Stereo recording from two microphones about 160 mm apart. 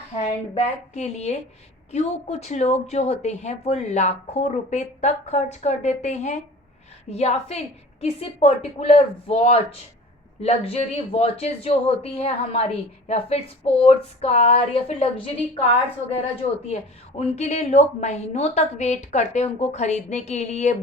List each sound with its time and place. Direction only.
0.2 s speech: 45° left (ahead or behind)
17.2 s speech: 45° left (ahead or behind)